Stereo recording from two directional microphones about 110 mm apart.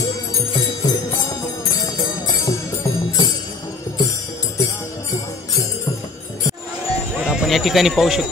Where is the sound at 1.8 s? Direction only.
35° left (ahead or behind).